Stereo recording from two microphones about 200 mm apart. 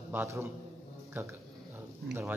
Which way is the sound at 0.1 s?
10° right (ahead or behind).